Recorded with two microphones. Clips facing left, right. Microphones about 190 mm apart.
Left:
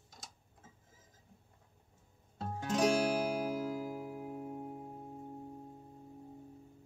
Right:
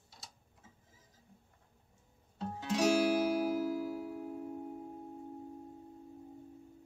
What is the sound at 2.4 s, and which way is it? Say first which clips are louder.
Music: even; 45° left (ahead or behind).